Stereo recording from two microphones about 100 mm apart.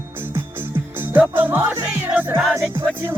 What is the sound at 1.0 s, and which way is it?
Music, 20° right (ahead or behind).